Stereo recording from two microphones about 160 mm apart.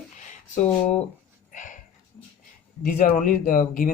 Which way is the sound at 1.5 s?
55° left (ahead or behind).